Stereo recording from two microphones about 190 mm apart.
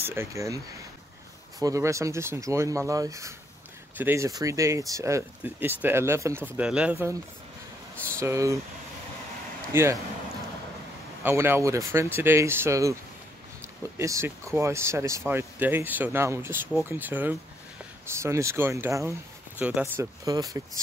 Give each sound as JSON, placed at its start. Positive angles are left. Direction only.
{"t": 0.0, "sound": "speech", "side_deg": -10}
{"t": 1.6, "sound": "speech", "side_deg": -15}
{"t": 8.2, "sound": "speech", "side_deg": -15}
{"t": 9.7, "sound": "a man's voice", "side_deg": -15}
{"t": 11.2, "sound": "speech", "side_deg": -10}